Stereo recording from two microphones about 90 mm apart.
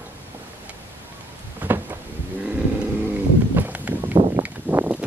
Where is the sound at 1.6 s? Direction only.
20° right (ahead or behind).